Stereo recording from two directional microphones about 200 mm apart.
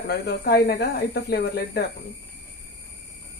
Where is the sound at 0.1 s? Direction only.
55° left (ahead or behind).